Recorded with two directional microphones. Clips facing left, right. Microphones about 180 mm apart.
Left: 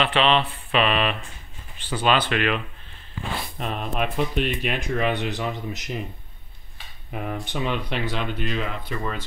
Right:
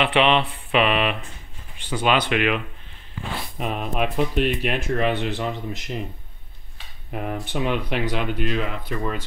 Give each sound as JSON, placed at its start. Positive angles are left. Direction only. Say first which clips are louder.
{"t": 0.0, "sound": "mantra", "louder": "right 2 dB", "side_deg": -20}
{"t": 3.5, "sound": "speech", "louder": "right 3 dB", "side_deg": -5}
{"t": 7.1, "sound": "speech", "louder": "right 2 dB", "side_deg": -5}